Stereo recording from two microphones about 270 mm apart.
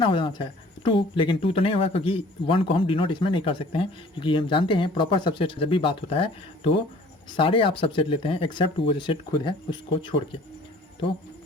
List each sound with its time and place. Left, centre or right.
0.0 s speech: centre